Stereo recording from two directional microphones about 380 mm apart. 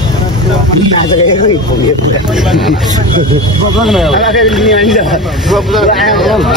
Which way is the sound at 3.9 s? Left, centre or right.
Centre.